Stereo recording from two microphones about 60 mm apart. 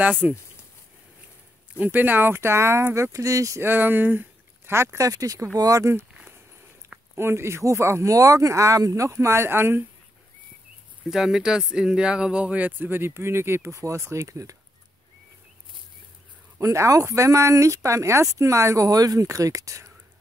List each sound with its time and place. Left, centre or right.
0.0 s speech: right
1.8 s speech: right
3.6 s speech: right
4.9 s speech: right
5.6 s speech: right
7.2 s speech: right
11.1 s speech: centre; by 14.6 s right
16.5 s speech: right